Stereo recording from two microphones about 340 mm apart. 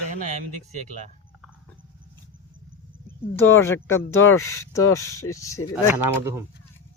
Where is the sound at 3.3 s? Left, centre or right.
Centre.